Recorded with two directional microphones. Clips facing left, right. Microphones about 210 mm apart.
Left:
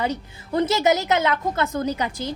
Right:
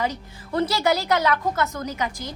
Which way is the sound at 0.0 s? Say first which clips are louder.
Left 2 dB; 25° left (ahead or behind).